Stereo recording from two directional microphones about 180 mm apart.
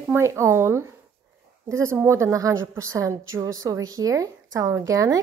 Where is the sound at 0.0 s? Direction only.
15° right (ahead or behind).